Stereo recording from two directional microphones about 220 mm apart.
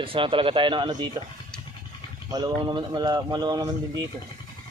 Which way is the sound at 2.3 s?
20° right (ahead or behind).